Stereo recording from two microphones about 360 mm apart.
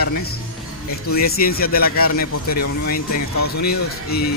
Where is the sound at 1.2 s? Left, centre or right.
Left.